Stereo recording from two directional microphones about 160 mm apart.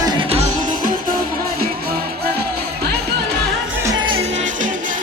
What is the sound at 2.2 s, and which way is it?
Music, 10° left (ahead or behind).